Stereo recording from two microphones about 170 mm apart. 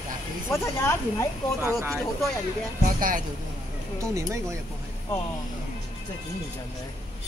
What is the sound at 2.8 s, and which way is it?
Speech, 50° right (ahead or behind).